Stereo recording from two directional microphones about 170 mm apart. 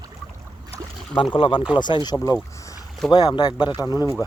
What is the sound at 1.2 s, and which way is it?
Speech, 30° left (ahead or behind).